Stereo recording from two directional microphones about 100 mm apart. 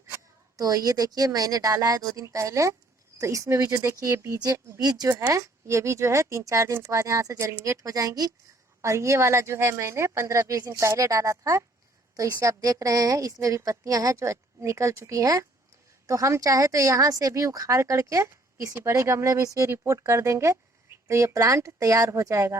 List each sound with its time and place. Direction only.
0.5 s a woman's voice: 40° right (ahead or behind)
4.4 s speech: 40° right (ahead or behind)
5.3 s a woman's voice: 30° right (ahead or behind)